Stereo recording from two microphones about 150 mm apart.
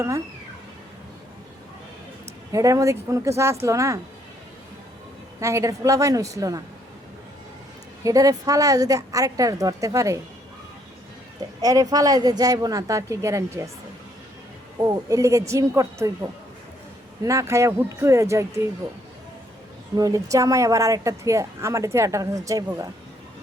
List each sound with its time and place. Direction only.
2.5 s a woman's voice: 20° right (ahead or behind)
5.4 s a woman's voice: 20° right (ahead or behind)
8.0 s a woman's voice: 25° right (ahead or behind)
11.6 s a woman's voice: 25° right (ahead or behind)
14.8 s a woman's voice: 25° right (ahead or behind)
20.0 s a woman's voice: 20° right (ahead or behind)